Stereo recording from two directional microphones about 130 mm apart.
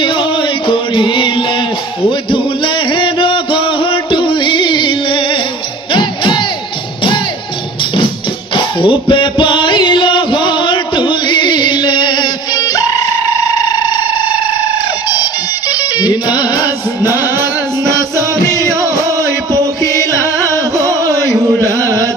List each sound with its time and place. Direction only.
0.0 s music: 40° left (ahead or behind)
8.5 s music: 40° left (ahead or behind)
13.6 s a sound: 35° left (ahead or behind)
15.7 s music: 30° left (ahead or behind)
17.8 s music: 25° right (ahead or behind)